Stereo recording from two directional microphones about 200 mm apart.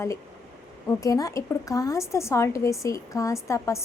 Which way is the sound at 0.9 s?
15° left (ahead or behind).